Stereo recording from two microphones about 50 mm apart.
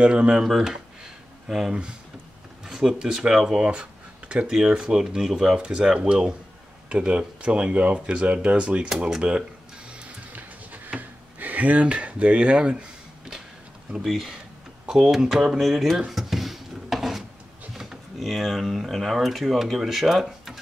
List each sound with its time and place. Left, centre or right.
0.0 s speech: centre
0.4 s speech: centre
2.6 s a sound: centre
3.1 s speech: centre; by 4.5 s right
4.5 s speech: centre
10.3 s a sound: right
14.0 s speech: centre
16.1 s a sound: centre
18.2 s speech: centre